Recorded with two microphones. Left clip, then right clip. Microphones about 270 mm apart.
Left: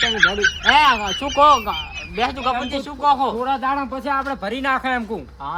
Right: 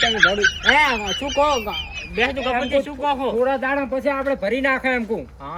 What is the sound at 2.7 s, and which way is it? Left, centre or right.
Speech, left.